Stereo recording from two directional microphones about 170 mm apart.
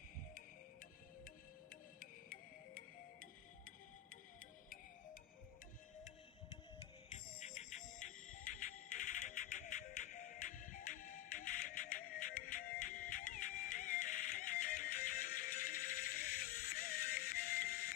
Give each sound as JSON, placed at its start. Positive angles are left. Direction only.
{"t": 0.3, "sound": "music", "side_deg": 55}
{"t": 7.3, "sound": "music", "side_deg": 40}